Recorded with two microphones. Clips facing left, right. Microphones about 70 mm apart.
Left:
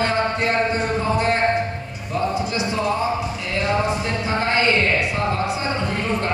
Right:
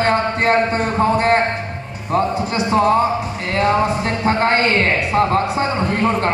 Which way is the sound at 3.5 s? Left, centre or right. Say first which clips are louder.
Right 5 dB; right.